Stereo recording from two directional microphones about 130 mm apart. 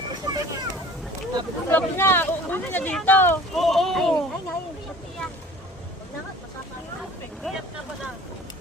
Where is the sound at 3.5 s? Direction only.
Centre (ahead or behind).